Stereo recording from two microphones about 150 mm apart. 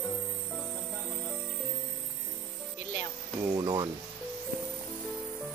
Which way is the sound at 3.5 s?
25° right (ahead or behind).